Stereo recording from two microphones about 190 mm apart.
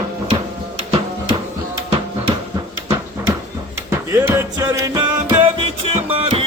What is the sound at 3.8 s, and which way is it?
Music, 15° right (ahead or behind).